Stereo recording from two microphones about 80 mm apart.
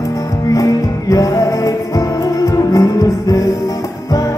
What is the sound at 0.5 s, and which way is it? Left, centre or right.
Music, left.